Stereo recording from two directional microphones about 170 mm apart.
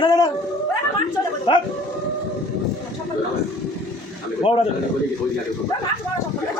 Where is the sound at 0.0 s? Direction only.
25° left (ahead or behind).